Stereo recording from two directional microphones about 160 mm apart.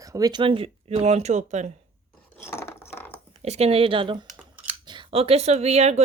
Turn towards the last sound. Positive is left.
turn(degrees=-45)  # may be behind; listen again after turning